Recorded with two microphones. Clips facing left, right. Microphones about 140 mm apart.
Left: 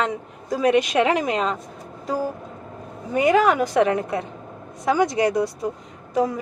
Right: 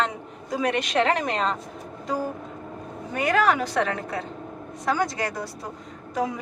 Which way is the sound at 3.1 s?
10° left (ahead or behind).